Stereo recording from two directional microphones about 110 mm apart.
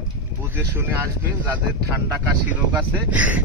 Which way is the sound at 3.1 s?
15° right (ahead or behind).